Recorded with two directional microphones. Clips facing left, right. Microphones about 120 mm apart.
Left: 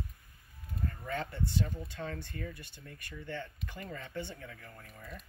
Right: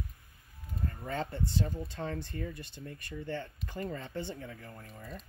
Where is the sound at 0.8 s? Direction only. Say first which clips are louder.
Right 1 dB; 30° right (ahead or behind).